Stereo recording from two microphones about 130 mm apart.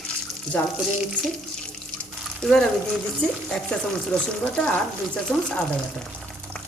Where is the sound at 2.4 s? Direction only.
5° left (ahead or behind).